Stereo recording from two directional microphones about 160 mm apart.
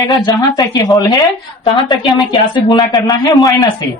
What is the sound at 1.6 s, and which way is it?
A woman's voice, 30° left (ahead or behind).